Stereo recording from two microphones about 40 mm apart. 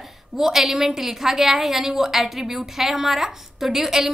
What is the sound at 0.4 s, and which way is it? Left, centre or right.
A woman's voice, centre.